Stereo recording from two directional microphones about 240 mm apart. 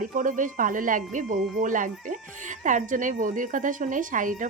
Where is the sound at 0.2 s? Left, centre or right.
Right.